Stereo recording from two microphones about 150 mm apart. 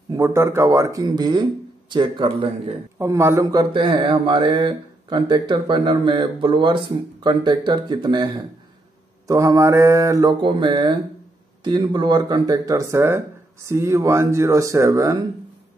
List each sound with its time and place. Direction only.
0.1 s speech: 20° right (ahead or behind); by 2.7 s 35° right (ahead or behind)
3.0 s speech: 20° right (ahead or behind)
9.3 s speech: 20° right (ahead or behind)